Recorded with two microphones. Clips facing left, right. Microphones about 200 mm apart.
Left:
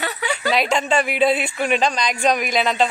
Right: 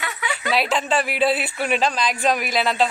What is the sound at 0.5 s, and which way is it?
Speech, 5° right (ahead or behind).